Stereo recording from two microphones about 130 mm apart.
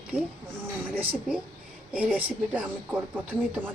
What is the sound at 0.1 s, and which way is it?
Speech, 15° right (ahead or behind).